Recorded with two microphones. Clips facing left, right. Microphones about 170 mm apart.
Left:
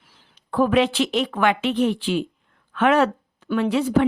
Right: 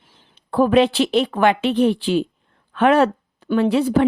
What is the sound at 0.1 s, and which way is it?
A woman's voice, 30° right (ahead or behind).